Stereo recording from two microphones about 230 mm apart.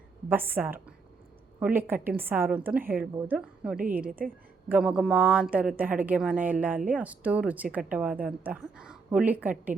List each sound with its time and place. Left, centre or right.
0.3 s a woman's voice: centre
4.0 s a woman's voice: right
4.7 s a woman's voice: centre